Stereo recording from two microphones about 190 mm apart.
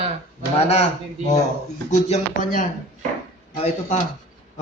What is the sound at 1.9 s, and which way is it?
Speech, 40° left (ahead or behind).